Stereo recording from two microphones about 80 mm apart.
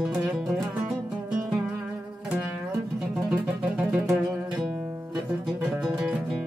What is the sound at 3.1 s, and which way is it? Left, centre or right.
Music, centre.